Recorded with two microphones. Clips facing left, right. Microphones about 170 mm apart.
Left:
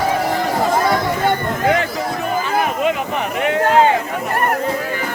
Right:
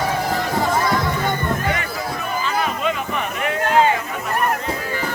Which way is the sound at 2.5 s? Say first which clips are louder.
Left 4 dB; 55° left (ahead or behind).